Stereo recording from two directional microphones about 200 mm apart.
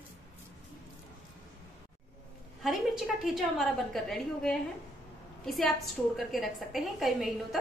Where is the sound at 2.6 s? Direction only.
Centre (ahead or behind).